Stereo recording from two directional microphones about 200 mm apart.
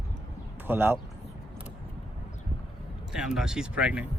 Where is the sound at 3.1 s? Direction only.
5° right (ahead or behind).